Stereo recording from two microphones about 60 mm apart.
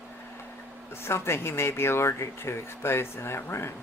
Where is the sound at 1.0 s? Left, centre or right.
Left.